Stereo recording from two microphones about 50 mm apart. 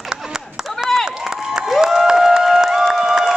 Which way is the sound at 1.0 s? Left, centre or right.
Centre.